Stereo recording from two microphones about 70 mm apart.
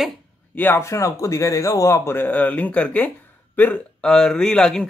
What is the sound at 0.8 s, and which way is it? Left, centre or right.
Speech, left.